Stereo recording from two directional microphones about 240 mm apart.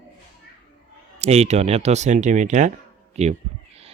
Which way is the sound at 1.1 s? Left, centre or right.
Right.